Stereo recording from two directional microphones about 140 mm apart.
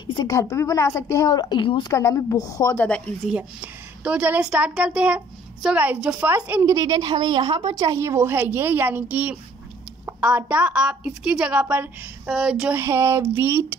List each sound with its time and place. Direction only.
0.0 s a woman's voice: 30° left (ahead or behind)
2.0 s a woman's voice: 20° left (ahead or behind)
2.8 s speech: 10° left (ahead or behind)
3.3 s a woman's voice: 10° right (ahead or behind)
6.7 s a woman's voice: 25° right (ahead or behind)
12.3 s speech: centre (ahead or behind)
12.7 s a woman's voice: 15° right (ahead or behind)